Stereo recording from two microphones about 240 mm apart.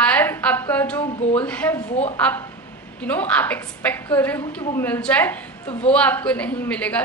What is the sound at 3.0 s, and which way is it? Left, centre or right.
A woman's voice, centre.